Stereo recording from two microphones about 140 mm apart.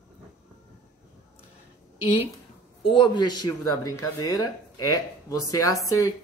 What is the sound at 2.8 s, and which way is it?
Speech, 35° left (ahead or behind).